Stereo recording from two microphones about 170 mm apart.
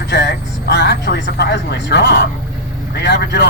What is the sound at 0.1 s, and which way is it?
Vehicle, 80° left.